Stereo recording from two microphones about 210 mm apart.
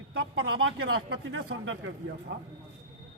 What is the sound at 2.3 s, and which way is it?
Speech, 55° right (ahead or behind).